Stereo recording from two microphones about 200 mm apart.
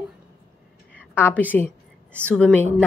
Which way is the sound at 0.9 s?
10° left (ahead or behind).